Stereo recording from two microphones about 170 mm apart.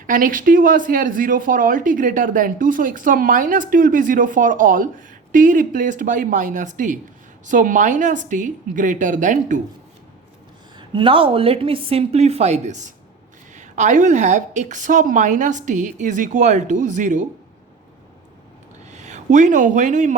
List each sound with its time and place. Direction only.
0.1 s speech: 55° right (ahead or behind)
10.8 s a woman's voice: 30° right (ahead or behind); by 17.2 s 45° right (ahead or behind)
18.9 s speech: 45° right (ahead or behind)